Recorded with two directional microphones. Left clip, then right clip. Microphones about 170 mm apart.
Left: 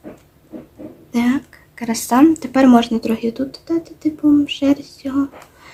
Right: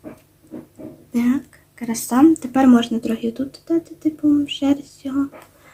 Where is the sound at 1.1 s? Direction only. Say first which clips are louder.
Left 2 dB; 20° left (ahead or behind).